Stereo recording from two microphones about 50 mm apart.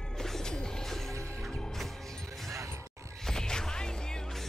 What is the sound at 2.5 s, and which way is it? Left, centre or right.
Music, right.